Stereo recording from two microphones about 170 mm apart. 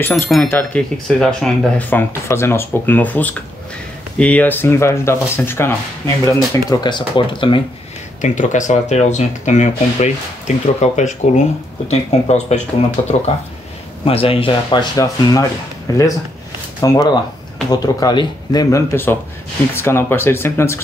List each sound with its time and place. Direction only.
0.3 s speech: 10° left (ahead or behind); by 7.6 s 30° left (ahead or behind)
8.2 s speech: 45° left (ahead or behind); by 15.4 s 25° left (ahead or behind)
16.8 s speech: 20° left (ahead or behind)